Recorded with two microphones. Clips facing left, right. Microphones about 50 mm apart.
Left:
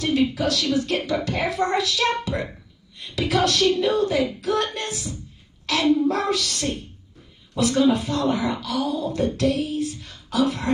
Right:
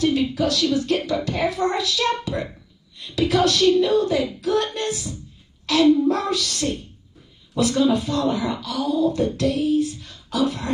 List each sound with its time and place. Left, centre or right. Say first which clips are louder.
0.0 s speech: right 1 dB; left